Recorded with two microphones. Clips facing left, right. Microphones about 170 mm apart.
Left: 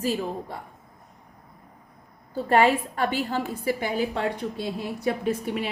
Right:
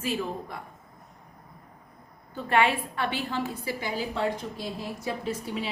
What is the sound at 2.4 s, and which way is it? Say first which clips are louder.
A woman's voice: left 4 dB; 40° left (ahead or behind).